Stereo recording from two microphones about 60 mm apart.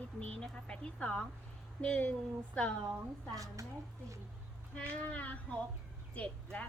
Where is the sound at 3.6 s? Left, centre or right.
Right.